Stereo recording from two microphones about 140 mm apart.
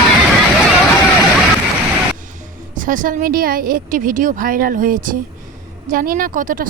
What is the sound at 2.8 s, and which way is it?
A woman's voice, 70° right (ahead or behind).